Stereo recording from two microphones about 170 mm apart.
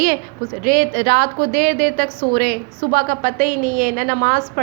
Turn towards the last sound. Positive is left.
turn(degrees=-55)  # may be behind; listen again after turning